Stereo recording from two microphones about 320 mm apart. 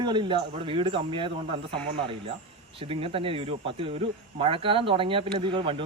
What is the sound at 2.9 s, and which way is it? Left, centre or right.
Speech, centre.